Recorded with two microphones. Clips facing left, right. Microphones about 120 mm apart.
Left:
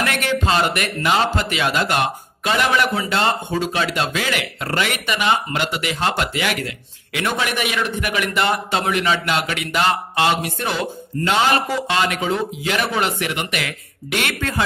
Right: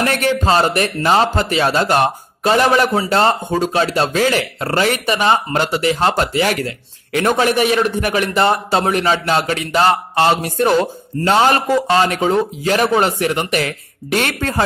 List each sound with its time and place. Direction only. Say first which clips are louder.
0.0 s speech: right 4 dB; 35° right (ahead or behind)